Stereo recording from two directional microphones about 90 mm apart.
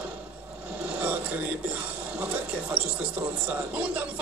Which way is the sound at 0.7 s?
15° right (ahead or behind).